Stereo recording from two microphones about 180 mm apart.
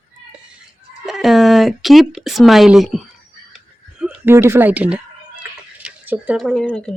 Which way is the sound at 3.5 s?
5° right (ahead or behind).